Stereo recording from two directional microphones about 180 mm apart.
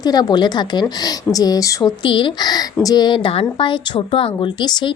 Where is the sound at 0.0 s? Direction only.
20° left (ahead or behind).